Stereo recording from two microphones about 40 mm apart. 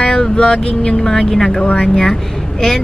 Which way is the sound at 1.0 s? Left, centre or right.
Centre.